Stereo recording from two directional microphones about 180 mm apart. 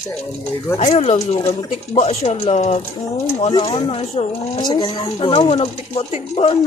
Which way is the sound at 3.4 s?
25° left (ahead or behind).